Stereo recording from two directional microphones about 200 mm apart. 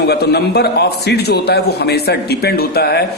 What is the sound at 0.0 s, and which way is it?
A man's voice, 55° left (ahead or behind).